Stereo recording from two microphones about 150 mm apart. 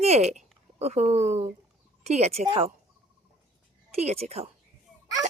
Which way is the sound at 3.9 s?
45° right (ahead or behind).